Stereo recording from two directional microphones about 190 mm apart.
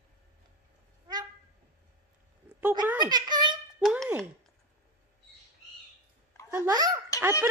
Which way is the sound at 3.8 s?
5° right (ahead or behind).